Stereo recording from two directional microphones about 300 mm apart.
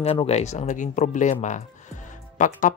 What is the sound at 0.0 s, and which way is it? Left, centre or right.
Speech, centre.